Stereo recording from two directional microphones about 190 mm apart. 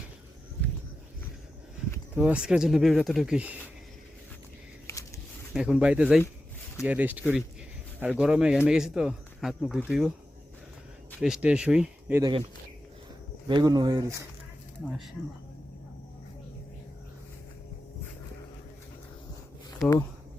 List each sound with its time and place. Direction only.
2.1 s speech: 5° right (ahead or behind)
4.9 s a sound: 15° left (ahead or behind)
5.5 s speech: 5° right (ahead or behind)
11.2 s speech: 5° right (ahead or behind)
13.5 s speech: 25° right (ahead or behind)
14.8 s speech: centre (ahead or behind)